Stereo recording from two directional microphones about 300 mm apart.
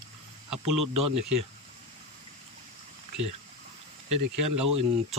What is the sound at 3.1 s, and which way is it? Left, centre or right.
Speech, right.